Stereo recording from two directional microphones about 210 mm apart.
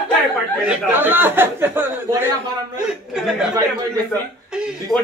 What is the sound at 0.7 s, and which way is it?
Speech, 10° right (ahead or behind).